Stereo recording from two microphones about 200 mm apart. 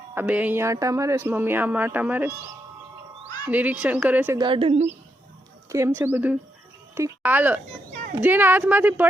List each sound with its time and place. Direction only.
0.1 s speech: 10° right (ahead or behind)
3.4 s speech: 10° right (ahead or behind)
4.4 s a woman's voice: 25° right (ahead or behind)
5.6 s speech: 15° right (ahead or behind)